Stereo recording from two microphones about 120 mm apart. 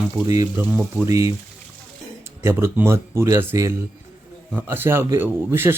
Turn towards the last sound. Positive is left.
turn(degrees=-20)  # may be behind; listen again after turning